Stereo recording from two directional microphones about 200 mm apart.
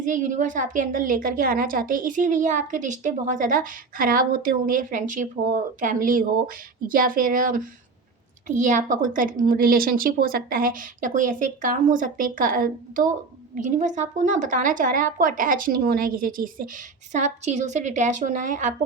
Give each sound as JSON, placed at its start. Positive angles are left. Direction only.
{"t": 0.0, "sound": "a woman's voice", "side_deg": -40}